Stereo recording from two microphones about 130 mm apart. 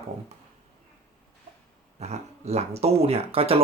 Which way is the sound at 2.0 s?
60° right (ahead or behind).